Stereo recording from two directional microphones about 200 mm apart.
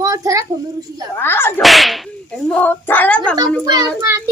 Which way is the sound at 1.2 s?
10° left (ahead or behind).